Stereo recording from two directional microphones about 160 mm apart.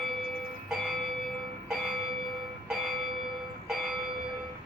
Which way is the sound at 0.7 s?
Centre (ahead or behind).